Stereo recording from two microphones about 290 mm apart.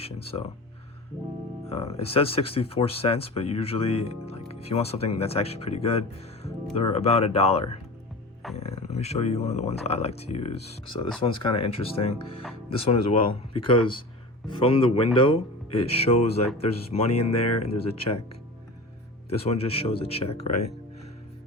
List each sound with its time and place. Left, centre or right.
0.0 s speech: centre
1.7 s speech: left
19.5 s speech: centre